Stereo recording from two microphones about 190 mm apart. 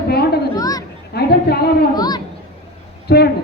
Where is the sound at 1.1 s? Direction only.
60° left (ahead or behind).